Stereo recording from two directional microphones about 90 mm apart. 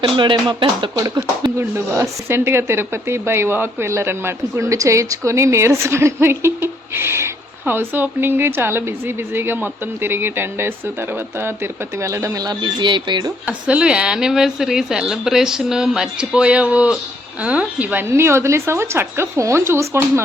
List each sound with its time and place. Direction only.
0.2 s speech: 60° right (ahead or behind)
0.9 s speech: 45° right (ahead or behind)
2.0 s speech: 30° right (ahead or behind)
12.4 s speech: 50° right (ahead or behind)
13.4 s a woman's voice: 15° right (ahead or behind)
18.0 s speech: 30° right (ahead or behind)